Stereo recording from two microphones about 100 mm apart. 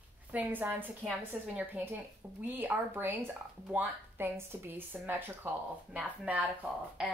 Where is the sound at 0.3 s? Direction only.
15° right (ahead or behind).